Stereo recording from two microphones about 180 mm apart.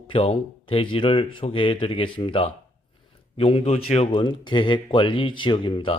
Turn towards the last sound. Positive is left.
turn(degrees=30)  # may be behind; listen again after turning